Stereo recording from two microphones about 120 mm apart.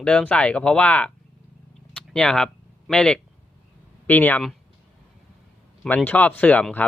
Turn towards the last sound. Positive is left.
turn(degrees=15)  # may be behind; listen again after turning